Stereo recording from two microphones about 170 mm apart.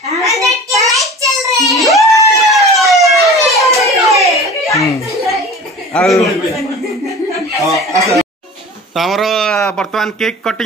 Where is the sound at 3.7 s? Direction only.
Centre (ahead or behind).